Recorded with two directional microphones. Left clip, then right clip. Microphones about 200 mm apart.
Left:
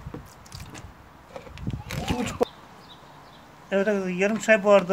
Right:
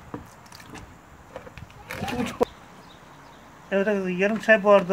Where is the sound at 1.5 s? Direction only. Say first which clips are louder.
Left 1 dB; 5° right (ahead or behind).